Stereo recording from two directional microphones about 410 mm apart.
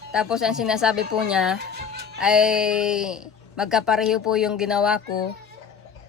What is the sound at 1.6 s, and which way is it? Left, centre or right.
Music, right.